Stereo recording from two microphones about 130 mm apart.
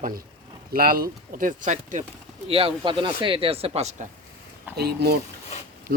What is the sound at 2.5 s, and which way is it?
Speech, 45° right (ahead or behind).